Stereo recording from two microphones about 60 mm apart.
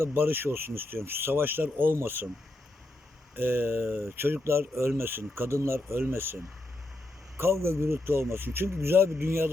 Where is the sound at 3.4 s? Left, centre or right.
Right.